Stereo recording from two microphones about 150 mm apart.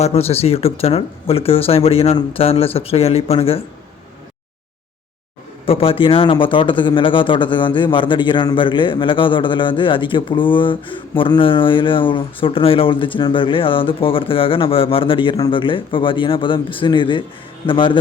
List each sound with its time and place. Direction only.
0.0 s speech: 45° left (ahead or behind)
5.6 s speech: 40° left (ahead or behind)